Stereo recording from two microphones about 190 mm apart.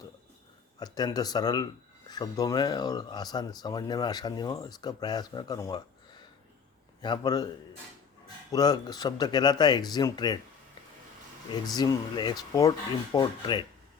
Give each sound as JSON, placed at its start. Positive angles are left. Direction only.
{"t": 0.8, "sound": "speech", "side_deg": 20}
{"t": 7.0, "sound": "speech", "side_deg": 20}
{"t": 8.5, "sound": "speech", "side_deg": 20}
{"t": 11.5, "sound": "speech", "side_deg": 20}